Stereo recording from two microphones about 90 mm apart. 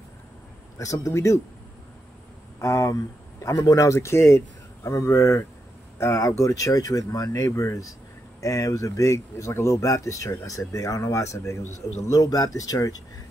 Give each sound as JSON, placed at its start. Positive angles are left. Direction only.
{"t": 1.0, "sound": "speech", "side_deg": 35}
{"t": 2.6, "sound": "speech", "side_deg": 35}